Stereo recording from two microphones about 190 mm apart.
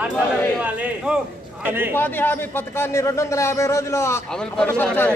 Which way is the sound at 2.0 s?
10° left (ahead or behind).